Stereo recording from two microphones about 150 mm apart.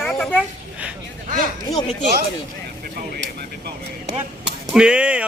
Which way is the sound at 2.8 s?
85° right.